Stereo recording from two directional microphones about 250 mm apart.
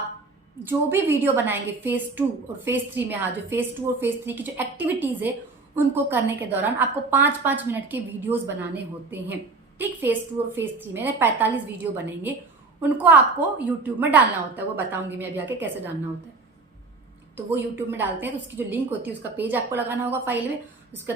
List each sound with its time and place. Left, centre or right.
0.6 s a woman's voice: centre
17.3 s a woman's voice: centre